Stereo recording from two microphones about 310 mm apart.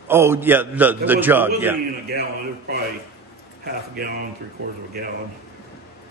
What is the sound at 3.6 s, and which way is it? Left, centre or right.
Speech, right.